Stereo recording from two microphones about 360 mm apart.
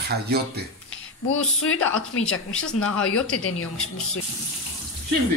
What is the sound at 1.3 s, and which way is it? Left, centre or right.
Speech, left.